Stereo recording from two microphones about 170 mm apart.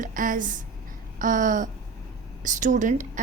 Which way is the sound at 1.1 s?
50° right (ahead or behind).